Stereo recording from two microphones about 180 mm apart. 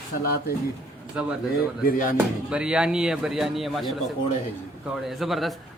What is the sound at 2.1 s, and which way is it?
A man's voice, 5° right (ahead or behind).